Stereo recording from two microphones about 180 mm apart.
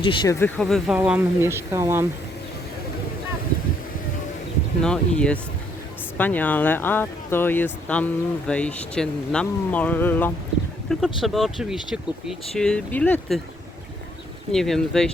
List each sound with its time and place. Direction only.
0.0 s speech: 25° left (ahead or behind)
0.3 s speech: 10° left (ahead or behind); by 2.0 s 15° right (ahead or behind)
4.8 s speech: 5° left (ahead or behind)
11.2 s speech: centre (ahead or behind)
14.5 s speech: centre (ahead or behind)